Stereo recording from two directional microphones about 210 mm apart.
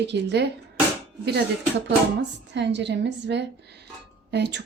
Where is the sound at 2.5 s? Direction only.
55° right (ahead or behind).